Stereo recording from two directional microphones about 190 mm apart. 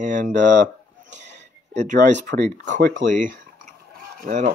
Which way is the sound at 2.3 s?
50° right (ahead or behind).